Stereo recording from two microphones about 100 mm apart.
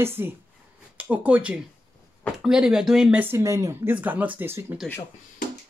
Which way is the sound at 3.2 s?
25° right (ahead or behind).